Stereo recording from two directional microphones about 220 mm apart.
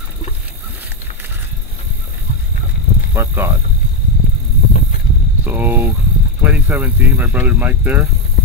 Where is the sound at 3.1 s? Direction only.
10° right (ahead or behind).